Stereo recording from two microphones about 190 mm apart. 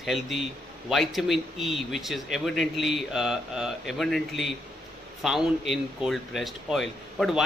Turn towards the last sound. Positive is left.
turn(degrees=0)  # may be behind; listen again after turning